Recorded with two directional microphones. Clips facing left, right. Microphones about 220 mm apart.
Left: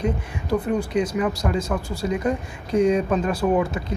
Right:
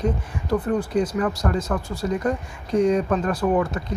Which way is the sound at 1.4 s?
15° left (ahead or behind).